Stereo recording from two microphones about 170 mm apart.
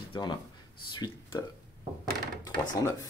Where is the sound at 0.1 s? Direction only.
25° left (ahead or behind).